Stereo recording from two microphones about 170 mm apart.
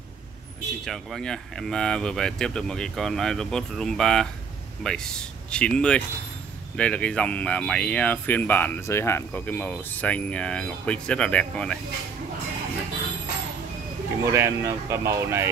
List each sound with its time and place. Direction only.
0.8 s speech: centre (ahead or behind)
14.2 s speech: 15° right (ahead or behind)